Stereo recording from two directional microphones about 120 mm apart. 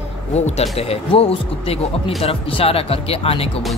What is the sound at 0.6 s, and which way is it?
Speech, 55° left (ahead or behind).